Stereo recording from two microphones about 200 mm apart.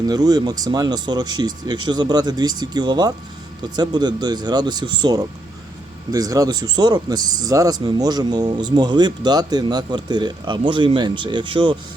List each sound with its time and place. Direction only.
0.0 s speech: 20° right (ahead or behind)